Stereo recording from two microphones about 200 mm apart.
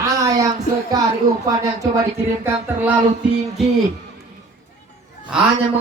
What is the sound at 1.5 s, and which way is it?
Speech, 15° right (ahead or behind).